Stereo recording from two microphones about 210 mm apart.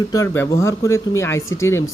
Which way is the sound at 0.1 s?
15° left (ahead or behind).